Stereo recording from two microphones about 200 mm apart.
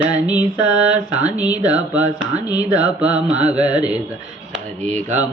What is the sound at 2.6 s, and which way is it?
Mantra, 20° left (ahead or behind).